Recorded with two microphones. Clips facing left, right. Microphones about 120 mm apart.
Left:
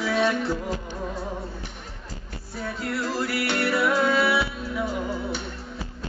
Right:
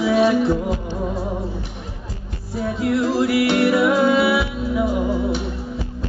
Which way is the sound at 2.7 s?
20° right (ahead or behind).